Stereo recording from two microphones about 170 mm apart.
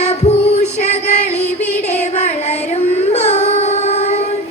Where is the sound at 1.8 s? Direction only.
40° left (ahead or behind).